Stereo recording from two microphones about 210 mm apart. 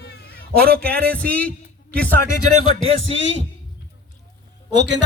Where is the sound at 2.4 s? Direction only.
90° right.